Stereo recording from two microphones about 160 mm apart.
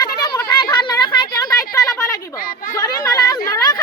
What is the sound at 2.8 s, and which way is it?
Chatter, 20° left (ahead or behind).